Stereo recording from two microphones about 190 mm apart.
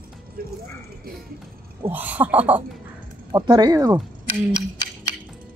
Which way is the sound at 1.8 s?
10° right (ahead or behind).